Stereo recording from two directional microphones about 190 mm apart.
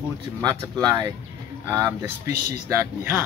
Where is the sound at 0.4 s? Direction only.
15° right (ahead or behind).